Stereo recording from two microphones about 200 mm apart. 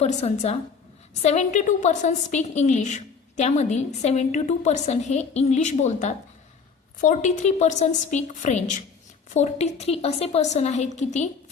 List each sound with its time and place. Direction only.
0.0 s a woman's voice: 35° left (ahead or behind)